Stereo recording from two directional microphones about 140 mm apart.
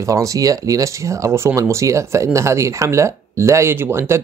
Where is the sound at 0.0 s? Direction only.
25° right (ahead or behind).